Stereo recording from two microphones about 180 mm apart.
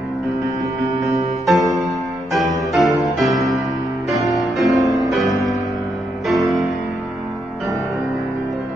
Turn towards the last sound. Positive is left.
turn(degrees=0)  # may be behind; listen again after turning